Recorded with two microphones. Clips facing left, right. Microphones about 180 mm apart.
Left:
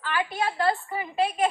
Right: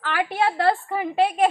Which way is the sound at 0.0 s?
65° right (ahead or behind).